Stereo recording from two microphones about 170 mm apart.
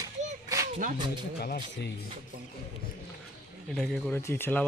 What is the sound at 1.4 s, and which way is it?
Speech, 65° left (ahead or behind).